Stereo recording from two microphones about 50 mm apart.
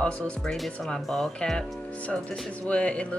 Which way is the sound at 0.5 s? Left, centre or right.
Centre.